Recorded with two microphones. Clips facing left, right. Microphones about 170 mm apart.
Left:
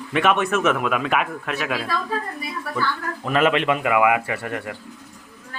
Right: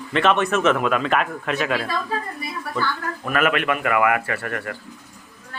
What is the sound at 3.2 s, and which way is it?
A man's voice, 25° left (ahead or behind).